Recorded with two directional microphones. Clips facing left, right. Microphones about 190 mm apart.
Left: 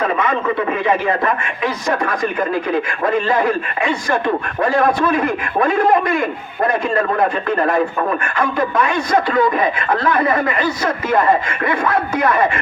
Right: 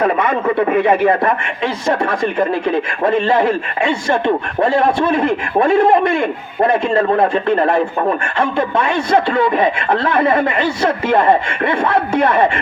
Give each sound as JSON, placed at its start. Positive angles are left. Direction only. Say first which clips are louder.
{"t": 0.8, "sound": "a man's voice", "louder": "right 7 dB", "side_deg": -60}
{"t": 1.2, "sound": "a man's voice", "louder": "right 2 dB", "side_deg": -30}